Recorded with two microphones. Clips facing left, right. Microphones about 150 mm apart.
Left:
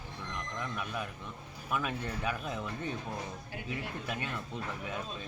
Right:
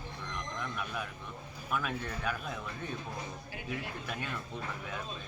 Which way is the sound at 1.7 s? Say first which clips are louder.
Left 1 dB; 5° left (ahead or behind).